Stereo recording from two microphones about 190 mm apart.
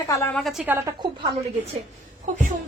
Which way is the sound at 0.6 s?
10° right (ahead or behind).